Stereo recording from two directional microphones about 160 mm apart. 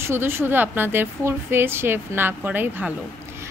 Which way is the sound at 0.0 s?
15° right (ahead or behind).